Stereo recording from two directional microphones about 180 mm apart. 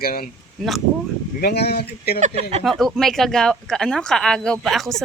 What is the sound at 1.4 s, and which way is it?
Speech, 60° left (ahead or behind).